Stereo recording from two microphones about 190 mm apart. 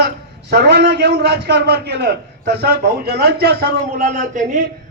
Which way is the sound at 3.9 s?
40° right (ahead or behind).